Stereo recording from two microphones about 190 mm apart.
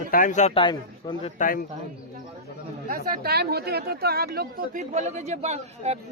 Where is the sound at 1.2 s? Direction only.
45° left (ahead or behind).